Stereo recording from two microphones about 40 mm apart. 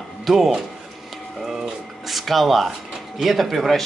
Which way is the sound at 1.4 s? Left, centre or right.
Centre.